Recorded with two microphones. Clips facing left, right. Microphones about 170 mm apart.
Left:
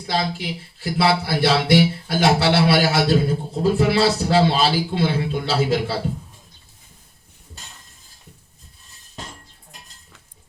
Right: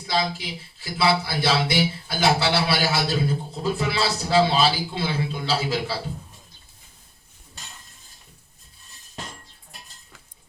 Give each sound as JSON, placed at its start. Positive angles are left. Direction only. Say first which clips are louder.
{"t": 0.1, "sound": "speech", "louder": "left 2 dB", "side_deg": 50}